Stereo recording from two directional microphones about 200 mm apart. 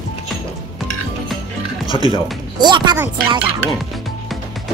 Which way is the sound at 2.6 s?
20° right (ahead or behind).